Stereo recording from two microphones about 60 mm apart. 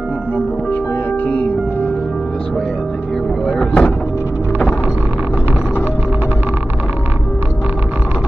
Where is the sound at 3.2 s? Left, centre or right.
Centre.